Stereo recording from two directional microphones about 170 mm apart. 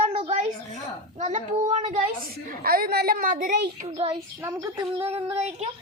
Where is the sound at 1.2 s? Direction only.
45° right (ahead or behind).